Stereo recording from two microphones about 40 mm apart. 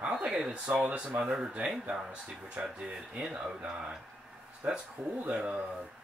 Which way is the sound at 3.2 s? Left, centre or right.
Right.